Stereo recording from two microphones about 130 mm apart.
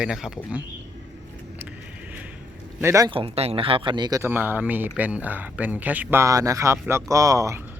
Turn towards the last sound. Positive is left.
turn(degrees=-25)  # may be behind; listen again after turning